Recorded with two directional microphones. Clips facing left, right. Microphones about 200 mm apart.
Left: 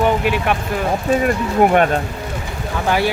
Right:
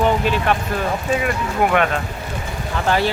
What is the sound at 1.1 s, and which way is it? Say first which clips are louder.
Speech: left 6 dB; 40° left (ahead or behind).